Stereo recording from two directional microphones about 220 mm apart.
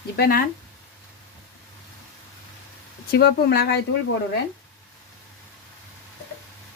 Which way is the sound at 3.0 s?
45° left (ahead or behind).